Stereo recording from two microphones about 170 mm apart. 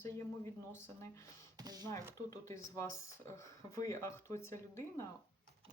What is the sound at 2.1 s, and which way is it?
Speech, 20° left (ahead or behind).